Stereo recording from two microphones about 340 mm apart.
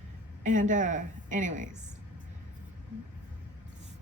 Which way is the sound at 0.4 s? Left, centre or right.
Right.